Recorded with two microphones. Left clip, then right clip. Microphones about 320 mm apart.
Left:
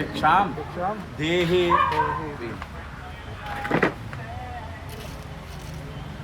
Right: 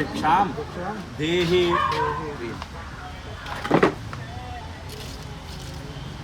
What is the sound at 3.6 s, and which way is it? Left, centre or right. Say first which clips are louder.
Vehicle: right 3 dB; right.